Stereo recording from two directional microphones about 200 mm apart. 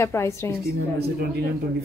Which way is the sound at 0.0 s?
15° left (ahead or behind).